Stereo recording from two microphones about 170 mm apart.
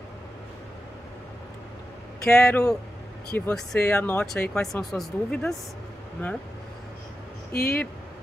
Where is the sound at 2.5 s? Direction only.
5° left (ahead or behind).